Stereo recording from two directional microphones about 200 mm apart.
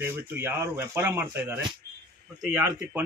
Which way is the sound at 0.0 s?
10° right (ahead or behind).